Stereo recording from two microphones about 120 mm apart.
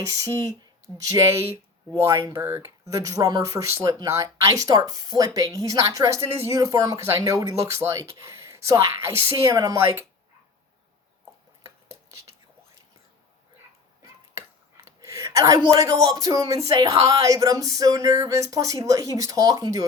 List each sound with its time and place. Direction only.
0.0 s speech: 30° right (ahead or behind)
2.4 s speech: 20° right (ahead or behind)
11.6 s dishes: 20° right (ahead or behind)
15.0 s a woman's voice: 25° right (ahead or behind)